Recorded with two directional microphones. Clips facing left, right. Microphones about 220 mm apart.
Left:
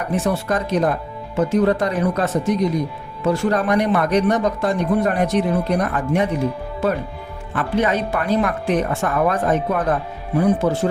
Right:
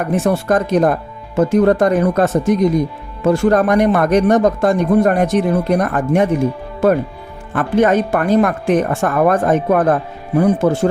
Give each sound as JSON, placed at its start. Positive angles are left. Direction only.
{"t": 0.0, "sound": "speech", "side_deg": -50}
{"t": 7.5, "sound": "speech", "side_deg": -50}